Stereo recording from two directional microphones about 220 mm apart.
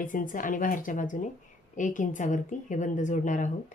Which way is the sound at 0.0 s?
35° left (ahead or behind).